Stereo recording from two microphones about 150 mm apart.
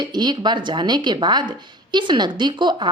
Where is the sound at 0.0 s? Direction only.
30° right (ahead or behind).